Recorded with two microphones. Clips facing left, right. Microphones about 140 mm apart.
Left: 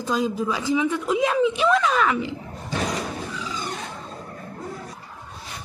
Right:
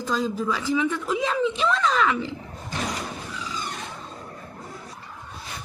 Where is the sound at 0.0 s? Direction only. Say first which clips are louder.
Left 2 dB; 15° left (ahead or behind).